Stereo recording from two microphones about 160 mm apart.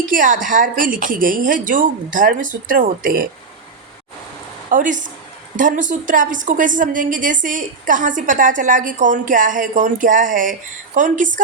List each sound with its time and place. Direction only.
0.0 s a woman's voice: 55° right (ahead or behind)
4.7 s a woman's voice: 55° right (ahead or behind)